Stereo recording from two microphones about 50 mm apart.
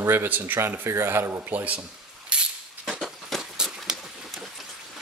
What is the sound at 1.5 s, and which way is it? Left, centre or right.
Dishes, right.